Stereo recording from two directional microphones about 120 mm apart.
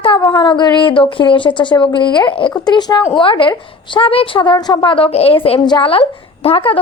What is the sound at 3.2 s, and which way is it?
A woman's voice, 45° left (ahead or behind).